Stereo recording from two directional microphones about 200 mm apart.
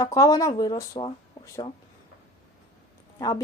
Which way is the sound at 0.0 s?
15° left (ahead or behind).